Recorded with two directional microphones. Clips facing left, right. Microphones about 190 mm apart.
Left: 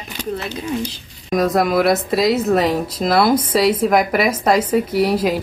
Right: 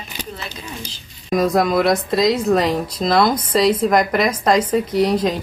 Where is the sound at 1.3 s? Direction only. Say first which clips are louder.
Even; centre (ahead or behind).